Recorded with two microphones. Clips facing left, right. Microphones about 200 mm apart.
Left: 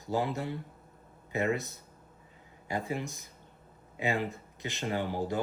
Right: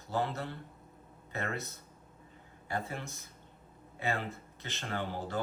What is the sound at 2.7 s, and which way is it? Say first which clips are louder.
Speech: left 4 dB; 15° left (ahead or behind).